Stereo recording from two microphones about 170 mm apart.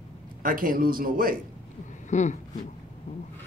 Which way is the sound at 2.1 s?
45° left (ahead or behind).